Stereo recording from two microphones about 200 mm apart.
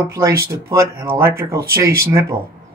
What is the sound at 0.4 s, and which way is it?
A woman's voice, 15° right (ahead or behind).